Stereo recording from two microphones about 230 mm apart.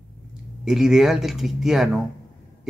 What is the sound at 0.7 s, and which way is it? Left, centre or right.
Speech, centre.